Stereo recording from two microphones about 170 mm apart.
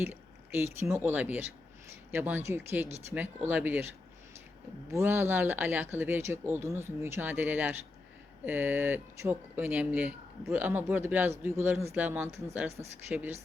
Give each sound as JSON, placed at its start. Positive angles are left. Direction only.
{"t": 0.0, "sound": "speech", "side_deg": -15}
{"t": 4.9, "sound": "speech", "side_deg": -15}